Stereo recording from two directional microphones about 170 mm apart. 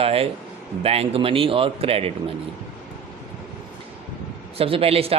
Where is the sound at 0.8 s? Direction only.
35° right (ahead or behind).